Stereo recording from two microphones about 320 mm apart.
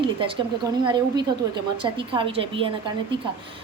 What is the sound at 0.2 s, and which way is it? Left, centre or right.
A woman's voice, centre.